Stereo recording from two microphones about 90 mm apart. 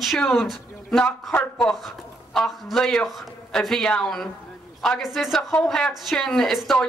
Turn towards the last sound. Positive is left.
turn(degrees=0)  # may be behind; listen again after turning